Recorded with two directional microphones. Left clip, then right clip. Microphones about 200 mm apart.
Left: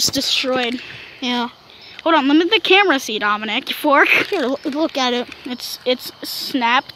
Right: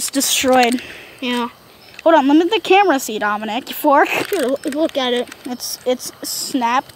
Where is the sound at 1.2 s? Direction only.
15° left (ahead or behind).